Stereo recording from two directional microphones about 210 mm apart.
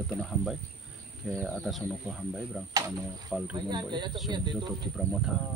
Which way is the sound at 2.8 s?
15° right (ahead or behind).